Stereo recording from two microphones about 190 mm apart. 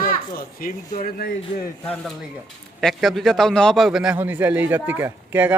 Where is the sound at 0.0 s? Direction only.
50° left (ahead or behind).